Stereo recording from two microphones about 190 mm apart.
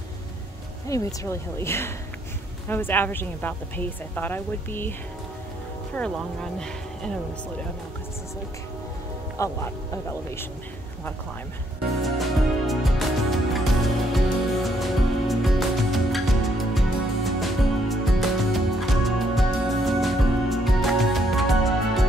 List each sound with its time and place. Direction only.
0.8 s a woman's voice: 15° left (ahead or behind)
5.9 s speech: 5° left (ahead or behind)
9.4 s a woman's voice: 15° left (ahead or behind)
12.0 s music: centre (ahead or behind)